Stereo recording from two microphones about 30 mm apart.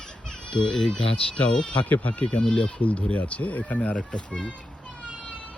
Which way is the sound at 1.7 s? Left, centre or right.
Left.